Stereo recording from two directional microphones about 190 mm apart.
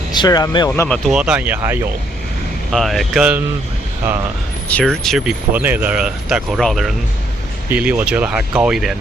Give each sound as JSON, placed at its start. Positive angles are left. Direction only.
{"t": 0.1, "sound": "speech", "side_deg": 20}
{"t": 0.7, "sound": "speech", "side_deg": 5}
{"t": 2.7, "sound": "speech", "side_deg": 0}
{"t": 4.7, "sound": "speech", "side_deg": 5}